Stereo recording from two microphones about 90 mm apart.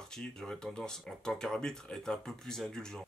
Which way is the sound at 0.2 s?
5° left (ahead or behind).